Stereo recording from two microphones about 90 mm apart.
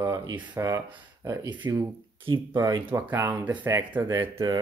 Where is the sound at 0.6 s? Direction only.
30° right (ahead or behind).